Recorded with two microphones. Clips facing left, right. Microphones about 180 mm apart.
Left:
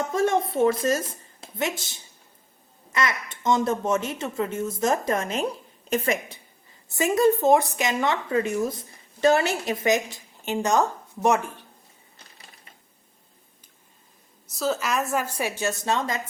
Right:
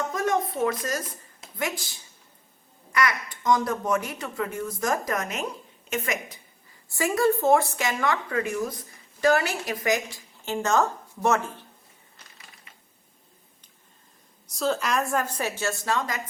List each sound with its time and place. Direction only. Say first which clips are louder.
0.1 s a woman's voice: left 3 dB; 30° left (ahead or behind)
14.4 s a woman's voice: even; centre (ahead or behind); by 16.2 s 25° left (ahead or behind)